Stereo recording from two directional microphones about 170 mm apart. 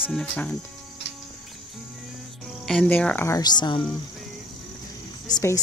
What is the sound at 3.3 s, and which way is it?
Speech, 25° left (ahead or behind).